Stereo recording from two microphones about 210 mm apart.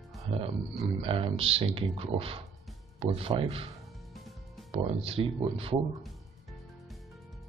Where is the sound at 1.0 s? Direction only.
25° right (ahead or behind).